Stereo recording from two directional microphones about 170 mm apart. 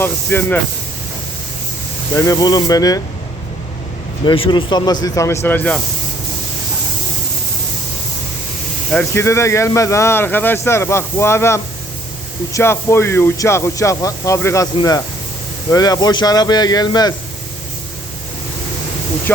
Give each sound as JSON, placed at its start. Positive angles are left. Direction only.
{"t": 0.0, "sound": "speech", "side_deg": 10}
{"t": 2.1, "sound": "speech", "side_deg": 20}
{"t": 4.3, "sound": "speech", "side_deg": 25}
{"t": 8.9, "sound": "speech", "side_deg": 10}